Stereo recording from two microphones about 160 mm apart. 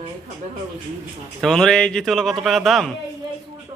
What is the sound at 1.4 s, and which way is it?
Speech, 5° left (ahead or behind).